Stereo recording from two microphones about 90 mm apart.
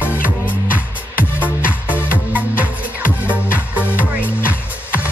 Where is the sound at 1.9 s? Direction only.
25° left (ahead or behind).